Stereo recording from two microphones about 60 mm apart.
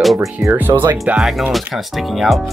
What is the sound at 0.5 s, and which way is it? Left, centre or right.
Speech, right.